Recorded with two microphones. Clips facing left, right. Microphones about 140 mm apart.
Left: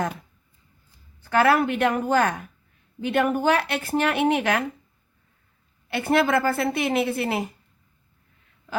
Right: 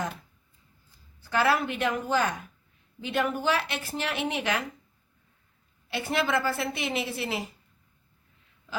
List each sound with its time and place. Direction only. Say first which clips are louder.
1.2 s speech: left 6 dB; 55° left (ahead or behind)
5.9 s speech: left 6 dB; 55° left (ahead or behind)